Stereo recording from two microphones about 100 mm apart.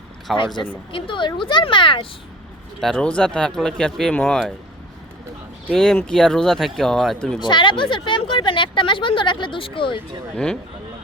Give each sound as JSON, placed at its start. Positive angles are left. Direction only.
{"t": 0.3, "sound": "speech", "side_deg": 55}
{"t": 2.8, "sound": "speech", "side_deg": 10}
{"t": 5.7, "sound": "speech", "side_deg": 5}
{"t": 7.3, "sound": "speech", "side_deg": 50}
{"t": 10.3, "sound": "speech", "side_deg": 5}